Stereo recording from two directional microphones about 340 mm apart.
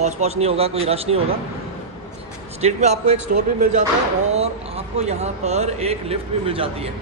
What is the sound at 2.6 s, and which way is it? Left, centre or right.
Speech, centre.